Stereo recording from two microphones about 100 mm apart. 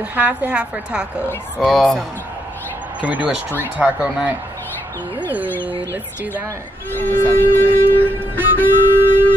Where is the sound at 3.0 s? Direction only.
10° right (ahead or behind).